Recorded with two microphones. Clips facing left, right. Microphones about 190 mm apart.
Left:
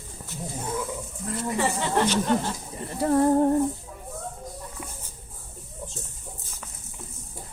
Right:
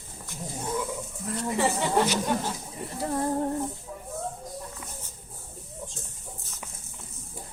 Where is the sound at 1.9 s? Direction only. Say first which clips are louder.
Left 2 dB; 10° right (ahead or behind).